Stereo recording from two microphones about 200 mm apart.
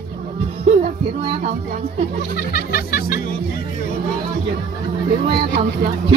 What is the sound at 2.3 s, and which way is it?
Speech, 55° left (ahead or behind).